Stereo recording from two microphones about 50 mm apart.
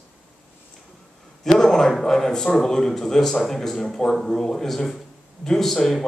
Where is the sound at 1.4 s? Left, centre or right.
Centre.